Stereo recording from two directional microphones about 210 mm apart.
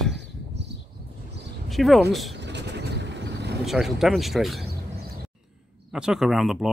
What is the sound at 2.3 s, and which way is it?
Vehicle, 55° right (ahead or behind).